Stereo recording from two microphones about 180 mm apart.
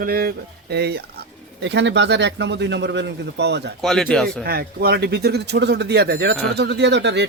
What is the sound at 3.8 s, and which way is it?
Speech, 5° left (ahead or behind).